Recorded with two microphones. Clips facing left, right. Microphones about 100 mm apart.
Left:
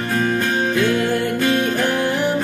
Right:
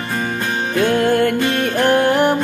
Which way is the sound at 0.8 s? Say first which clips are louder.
Right 4 dB; 55° right (ahead or behind).